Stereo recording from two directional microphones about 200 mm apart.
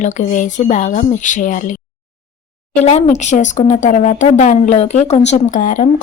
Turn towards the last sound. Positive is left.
turn(degrees=40)  # may be behind; listen again after turning